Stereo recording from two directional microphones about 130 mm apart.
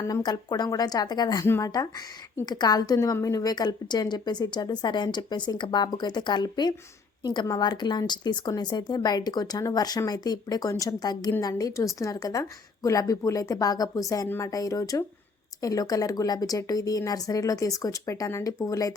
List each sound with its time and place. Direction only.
0.0 s speech: 30° left (ahead or behind)